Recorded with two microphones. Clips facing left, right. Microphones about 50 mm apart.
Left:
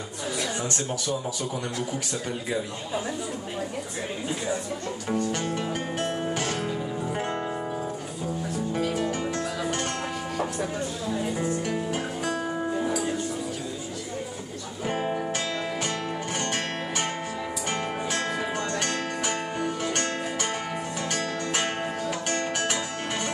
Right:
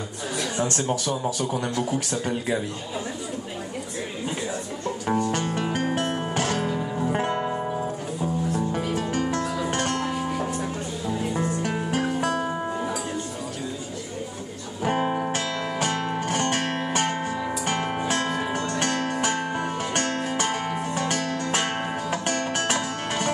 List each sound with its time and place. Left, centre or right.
5.0 s music: right
5.7 s music: right
9.3 s music: right
11.9 s music: right
12.4 s music: right
14.9 s music: right